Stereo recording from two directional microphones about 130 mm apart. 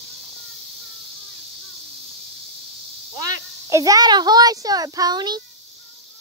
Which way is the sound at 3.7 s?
25° right (ahead or behind).